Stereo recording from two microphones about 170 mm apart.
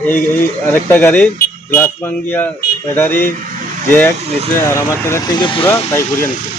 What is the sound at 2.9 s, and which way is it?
Speech, 10° left (ahead or behind).